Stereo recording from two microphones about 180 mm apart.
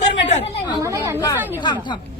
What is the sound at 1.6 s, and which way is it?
Speech, 25° left (ahead or behind).